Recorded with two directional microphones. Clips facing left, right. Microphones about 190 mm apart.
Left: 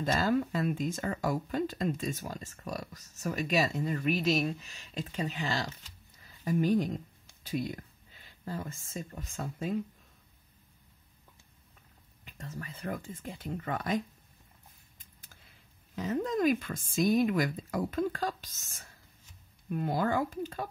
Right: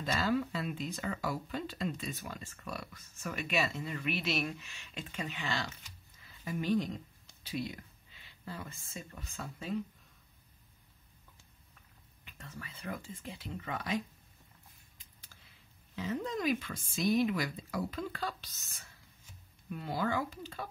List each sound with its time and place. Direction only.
0.0 s speech: 45° left (ahead or behind)
6.1 s a sound: 45° left (ahead or behind)
7.4 s speech: 50° left (ahead or behind)
12.3 s speech: 40° left (ahead or behind)
15.3 s a sound: 45° left (ahead or behind)
16.0 s speech: 45° left (ahead or behind)
17.0 s speech: centre (ahead or behind)
17.3 s speech: 50° left (ahead or behind)